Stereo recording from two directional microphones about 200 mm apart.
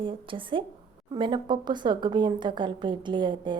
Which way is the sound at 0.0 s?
25° right (ahead or behind).